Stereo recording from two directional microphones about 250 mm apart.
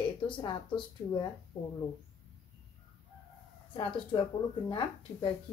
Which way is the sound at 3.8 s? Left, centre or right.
Centre.